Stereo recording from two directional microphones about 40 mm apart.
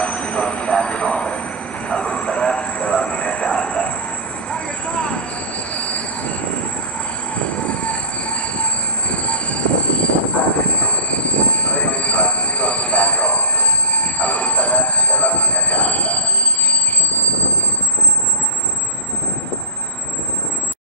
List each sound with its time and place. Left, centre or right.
0.0 s train: left
4.5 s vehicle: left
5.7 s train: left
7.3 s train: left
9.1 s train: left